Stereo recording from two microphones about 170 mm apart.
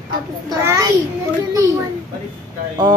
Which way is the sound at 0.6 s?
15° right (ahead or behind).